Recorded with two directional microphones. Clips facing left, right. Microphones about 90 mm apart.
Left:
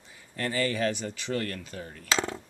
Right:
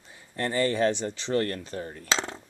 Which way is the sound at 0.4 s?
25° right (ahead or behind).